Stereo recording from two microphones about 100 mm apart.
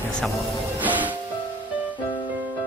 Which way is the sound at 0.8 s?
15° right (ahead or behind).